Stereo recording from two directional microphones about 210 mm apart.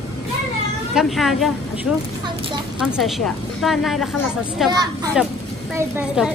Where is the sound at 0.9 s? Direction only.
Centre (ahead or behind).